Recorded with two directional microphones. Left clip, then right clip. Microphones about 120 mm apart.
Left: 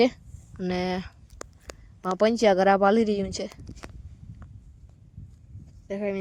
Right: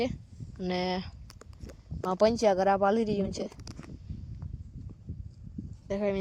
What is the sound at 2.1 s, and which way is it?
Speech, 40° left (ahead or behind).